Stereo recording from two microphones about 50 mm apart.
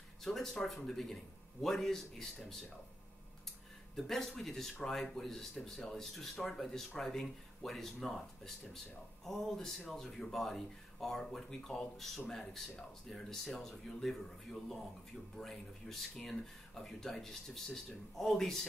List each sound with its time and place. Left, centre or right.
0.2 s speech: centre
3.9 s speech: centre